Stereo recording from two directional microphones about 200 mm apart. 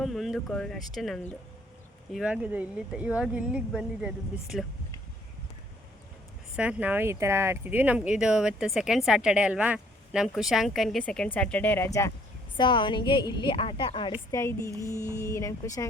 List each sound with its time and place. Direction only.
0.0 s speech: centre (ahead or behind)
6.6 s speech: 5° right (ahead or behind); by 12.1 s 15° left (ahead or behind)
12.5 s a woman's voice: 25° left (ahead or behind)